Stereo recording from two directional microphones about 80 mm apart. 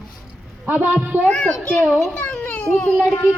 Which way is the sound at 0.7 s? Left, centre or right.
Right.